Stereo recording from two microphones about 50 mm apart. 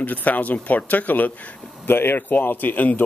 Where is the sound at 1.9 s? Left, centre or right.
Left.